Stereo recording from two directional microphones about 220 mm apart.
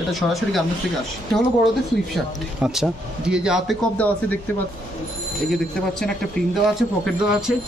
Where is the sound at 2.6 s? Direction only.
5° right (ahead or behind).